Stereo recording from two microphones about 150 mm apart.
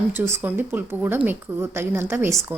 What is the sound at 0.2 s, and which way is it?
A woman's voice, 15° right (ahead or behind).